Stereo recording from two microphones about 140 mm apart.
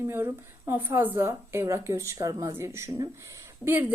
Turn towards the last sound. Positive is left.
turn(degrees=-15)  # may be behind; listen again after turning